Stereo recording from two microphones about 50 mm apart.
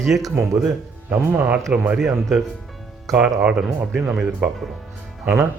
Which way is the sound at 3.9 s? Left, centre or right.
Centre.